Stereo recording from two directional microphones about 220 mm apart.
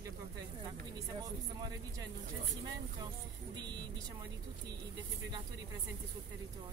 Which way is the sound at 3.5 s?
20° right (ahead or behind).